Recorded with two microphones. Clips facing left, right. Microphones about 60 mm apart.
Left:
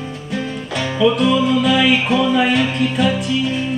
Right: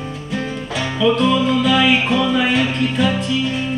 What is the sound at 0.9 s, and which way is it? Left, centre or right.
Music, centre.